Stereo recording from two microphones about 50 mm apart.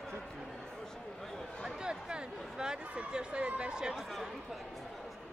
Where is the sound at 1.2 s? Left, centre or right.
Centre.